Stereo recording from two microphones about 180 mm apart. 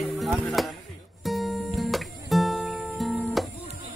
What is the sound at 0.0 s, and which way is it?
Music, centre (ahead or behind).